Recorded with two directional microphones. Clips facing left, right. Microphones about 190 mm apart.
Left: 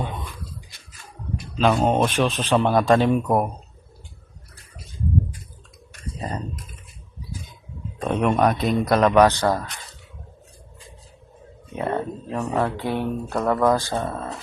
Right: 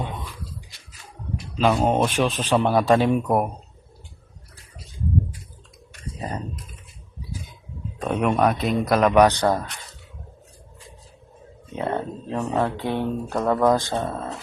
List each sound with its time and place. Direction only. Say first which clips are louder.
1.5 s speech: left 1 dB; 5° right (ahead or behind)
7.9 s speech: left 1 dB; 5° right (ahead or behind)
11.8 s a sound: left 1 dB; 20° right (ahead or behind)
12.5 s speech: even; 15° right (ahead or behind)
13.3 s speech: even; 10° right (ahead or behind)
13.7 s speech: right 1 dB; 20° right (ahead or behind)